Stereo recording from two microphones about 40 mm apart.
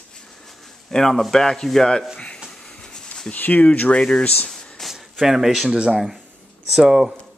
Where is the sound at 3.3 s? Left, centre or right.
Left.